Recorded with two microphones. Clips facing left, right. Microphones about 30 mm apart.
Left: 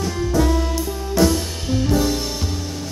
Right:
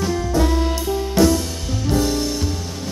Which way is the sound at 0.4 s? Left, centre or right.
Centre.